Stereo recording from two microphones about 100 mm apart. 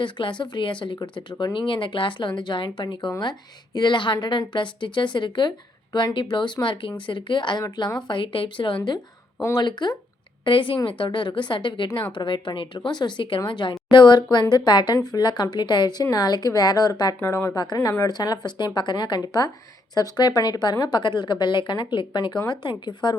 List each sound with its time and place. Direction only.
0.0 s a woman's voice: 55° left (ahead or behind)
9.4 s a woman's voice: 40° left (ahead or behind)
10.4 s a woman's voice: 55° left (ahead or behind)